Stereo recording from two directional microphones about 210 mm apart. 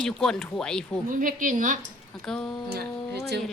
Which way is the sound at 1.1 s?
40° right (ahead or behind).